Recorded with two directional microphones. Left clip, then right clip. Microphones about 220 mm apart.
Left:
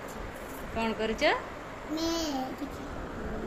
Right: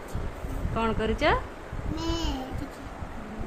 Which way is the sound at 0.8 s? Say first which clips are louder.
Right 3 dB; 25° right (ahead or behind).